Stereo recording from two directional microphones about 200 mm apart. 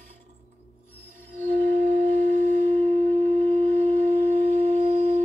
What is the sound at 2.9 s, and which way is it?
Wind instrument, 35° right (ahead or behind).